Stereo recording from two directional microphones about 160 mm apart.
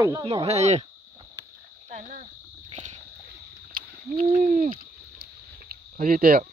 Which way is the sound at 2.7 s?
45° right (ahead or behind).